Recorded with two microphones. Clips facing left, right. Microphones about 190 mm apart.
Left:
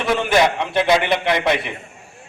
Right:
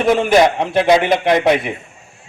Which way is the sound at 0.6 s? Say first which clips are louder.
Right 4 dB; 45° right (ahead or behind).